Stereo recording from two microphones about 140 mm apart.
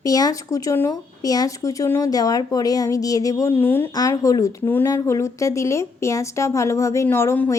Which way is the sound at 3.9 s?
25° left (ahead or behind).